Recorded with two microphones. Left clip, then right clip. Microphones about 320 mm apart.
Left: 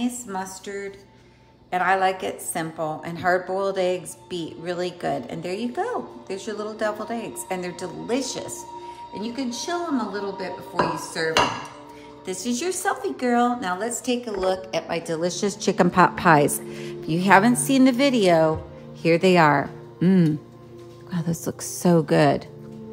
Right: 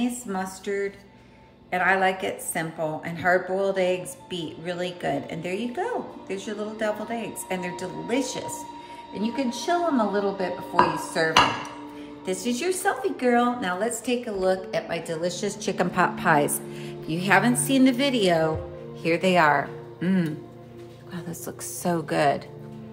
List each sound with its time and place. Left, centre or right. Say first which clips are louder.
0.3 s a woman's voice: right 2 dB; centre; by 22.4 s left